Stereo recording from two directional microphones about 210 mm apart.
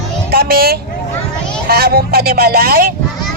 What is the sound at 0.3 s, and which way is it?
Speech, 45° right (ahead or behind).